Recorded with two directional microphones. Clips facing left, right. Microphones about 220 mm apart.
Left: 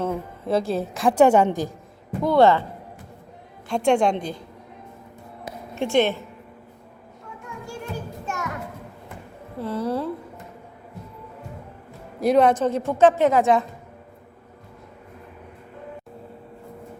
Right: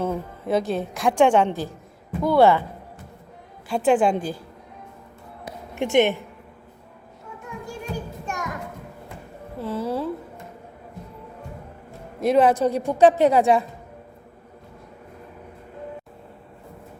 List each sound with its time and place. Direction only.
0.0 s a woman's voice: 5° right (ahead or behind); by 1.7 s 15° left (ahead or behind)
2.2 s a woman's voice: 5° right (ahead or behind)
3.7 s a woman's voice: 5° right (ahead or behind)
5.7 s a woman's voice: 15° right (ahead or behind)
7.9 s children playing: 15° right (ahead or behind)
9.6 s a sound: 5° right (ahead or behind)
12.2 s a woman's voice: centre (ahead or behind)